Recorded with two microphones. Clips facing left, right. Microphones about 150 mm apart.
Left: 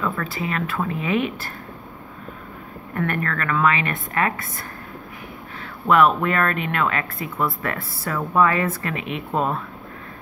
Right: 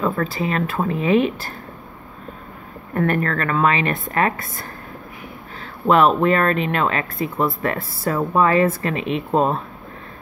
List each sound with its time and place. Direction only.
0.0 s a woman's voice: 35° right (ahead or behind)
2.9 s a woman's voice: 35° right (ahead or behind)
5.9 s speech: 30° right (ahead or behind)